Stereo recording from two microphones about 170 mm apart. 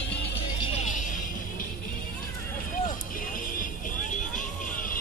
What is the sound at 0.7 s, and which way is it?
Vehicle, 45° left (ahead or behind).